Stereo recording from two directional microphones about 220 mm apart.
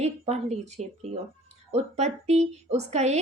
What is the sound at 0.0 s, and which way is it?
A woman's voice, 30° right (ahead or behind).